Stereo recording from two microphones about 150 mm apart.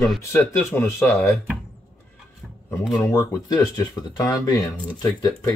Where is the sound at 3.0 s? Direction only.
25° left (ahead or behind).